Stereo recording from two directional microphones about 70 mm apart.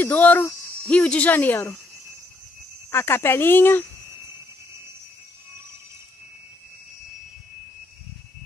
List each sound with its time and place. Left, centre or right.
0.0 s speech: left
2.9 s speech: left